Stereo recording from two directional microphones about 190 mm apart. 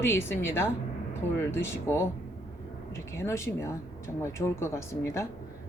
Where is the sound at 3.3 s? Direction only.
15° left (ahead or behind).